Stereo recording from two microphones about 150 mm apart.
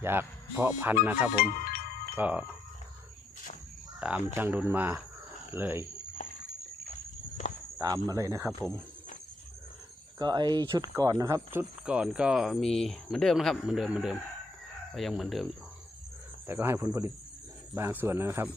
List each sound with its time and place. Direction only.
0.0 s speech: 15° right (ahead or behind)
1.4 s speech: 80° left
2.1 s chime: 10° right (ahead or behind)
4.0 s speech: 5° right (ahead or behind)
7.8 s speech: 25° right (ahead or behind)
10.2 s speech: 30° right (ahead or behind); by 15.4 s centre (ahead or behind)
16.5 s speech: 15° right (ahead or behind)